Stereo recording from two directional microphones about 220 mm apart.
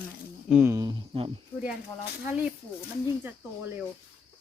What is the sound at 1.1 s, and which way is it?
Speech, 25° right (ahead or behind).